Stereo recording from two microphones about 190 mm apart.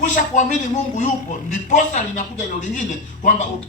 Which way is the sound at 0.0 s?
40° left (ahead or behind).